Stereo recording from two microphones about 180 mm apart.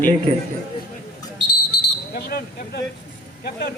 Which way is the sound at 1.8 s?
60° left (ahead or behind).